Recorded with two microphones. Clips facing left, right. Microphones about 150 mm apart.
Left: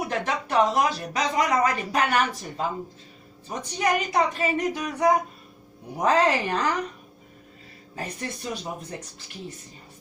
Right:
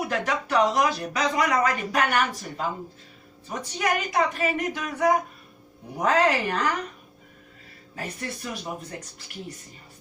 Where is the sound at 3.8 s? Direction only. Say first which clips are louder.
Left 1 dB; 30° left (ahead or behind).